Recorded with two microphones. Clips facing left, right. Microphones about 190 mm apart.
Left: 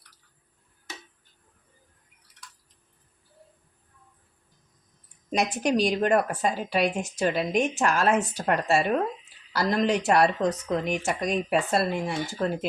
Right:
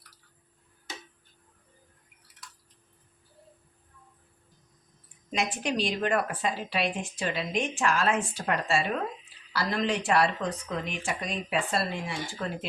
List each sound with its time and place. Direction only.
5.3 s a woman's voice: 40° left (ahead or behind)